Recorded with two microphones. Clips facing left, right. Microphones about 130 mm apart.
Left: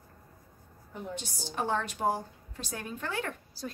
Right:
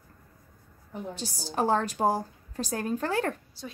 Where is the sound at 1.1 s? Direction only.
35° right (ahead or behind).